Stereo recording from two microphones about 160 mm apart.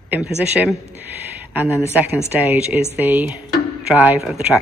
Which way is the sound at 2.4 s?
10° right (ahead or behind).